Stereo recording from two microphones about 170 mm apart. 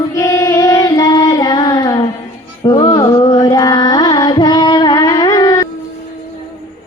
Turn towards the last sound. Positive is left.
turn(degrees=20)  # may be behind; listen again after turning